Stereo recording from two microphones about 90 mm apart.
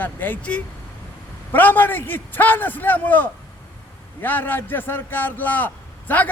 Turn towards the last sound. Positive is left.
turn(degrees=20)  # may be behind; listen again after turning